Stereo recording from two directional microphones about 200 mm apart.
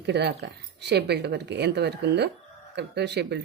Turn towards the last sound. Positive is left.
turn(degrees=-55)  # may be behind; listen again after turning